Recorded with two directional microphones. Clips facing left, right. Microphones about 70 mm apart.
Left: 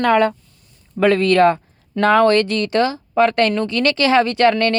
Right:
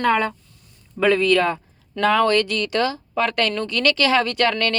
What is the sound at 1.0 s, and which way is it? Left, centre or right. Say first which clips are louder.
Speech: left 4 dB; left.